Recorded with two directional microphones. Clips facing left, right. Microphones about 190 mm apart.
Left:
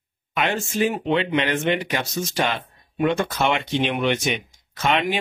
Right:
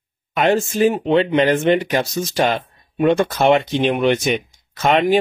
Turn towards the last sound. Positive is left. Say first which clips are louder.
# right 7 dB
turn(degrees=-40)  # may be behind; listen again after turning